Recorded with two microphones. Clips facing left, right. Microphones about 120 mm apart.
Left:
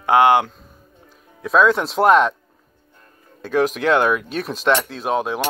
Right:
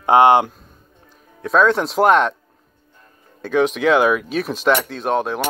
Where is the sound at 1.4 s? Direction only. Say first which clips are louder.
Even; centre (ahead or behind).